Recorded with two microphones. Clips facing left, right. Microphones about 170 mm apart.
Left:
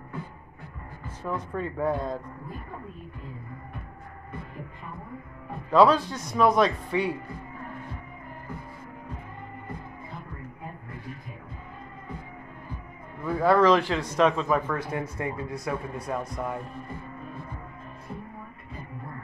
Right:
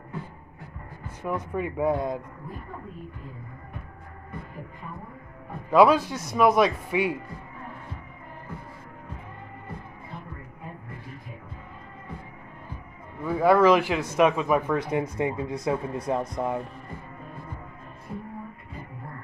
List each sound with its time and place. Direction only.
1.2 s speech: 10° right (ahead or behind)
5.7 s speech: 10° right (ahead or behind)
13.2 s speech: 10° right (ahead or behind)